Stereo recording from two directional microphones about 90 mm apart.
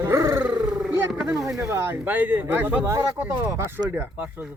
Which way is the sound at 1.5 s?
30° right (ahead or behind).